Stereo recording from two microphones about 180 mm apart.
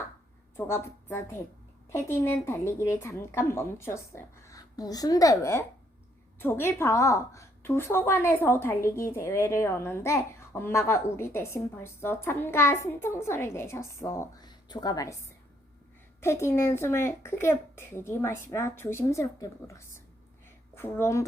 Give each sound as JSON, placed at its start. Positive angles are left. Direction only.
{"t": 0.5, "sound": "a woman's voice", "side_deg": 15}